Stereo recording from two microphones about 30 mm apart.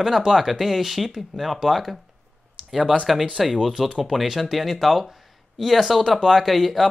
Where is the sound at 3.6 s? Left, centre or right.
Centre.